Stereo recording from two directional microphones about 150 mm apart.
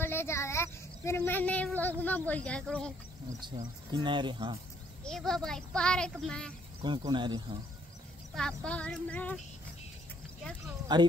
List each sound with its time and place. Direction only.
0.0 s speech: 15° left (ahead or behind)
3.9 s speech: 30° right (ahead or behind)
5.0 s a child's voice: 5° left (ahead or behind)
7.1 s speech: 30° right (ahead or behind)
8.4 s speech: 5° left (ahead or behind)
10.9 s speech: 30° right (ahead or behind)